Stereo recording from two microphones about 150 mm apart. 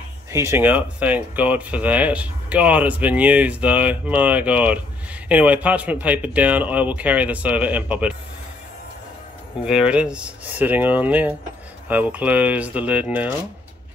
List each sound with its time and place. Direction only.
0.3 s speech: 20° right (ahead or behind)
9.7 s speech: 5° right (ahead or behind)